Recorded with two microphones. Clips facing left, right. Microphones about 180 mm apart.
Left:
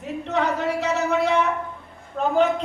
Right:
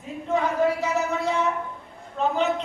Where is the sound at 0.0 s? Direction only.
75° left (ahead or behind).